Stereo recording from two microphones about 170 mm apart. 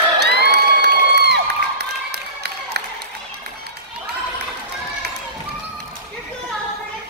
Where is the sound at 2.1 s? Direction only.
75° right (ahead or behind).